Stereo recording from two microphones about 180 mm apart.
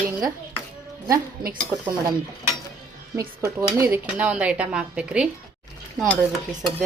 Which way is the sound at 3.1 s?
15° right (ahead or behind).